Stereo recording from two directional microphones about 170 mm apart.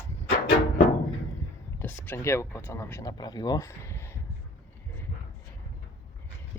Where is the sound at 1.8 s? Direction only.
10° left (ahead or behind).